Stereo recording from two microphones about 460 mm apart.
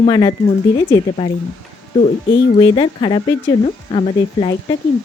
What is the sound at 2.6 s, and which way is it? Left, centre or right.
A woman's voice, centre.